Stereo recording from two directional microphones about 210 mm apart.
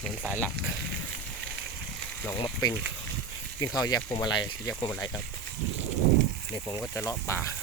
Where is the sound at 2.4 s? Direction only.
20° left (ahead or behind).